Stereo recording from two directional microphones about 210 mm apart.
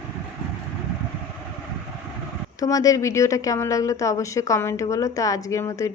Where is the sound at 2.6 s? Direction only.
15° left (ahead or behind).